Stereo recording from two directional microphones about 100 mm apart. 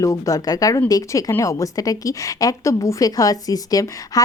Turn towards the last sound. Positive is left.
turn(degrees=35)  # may be behind; listen again after turning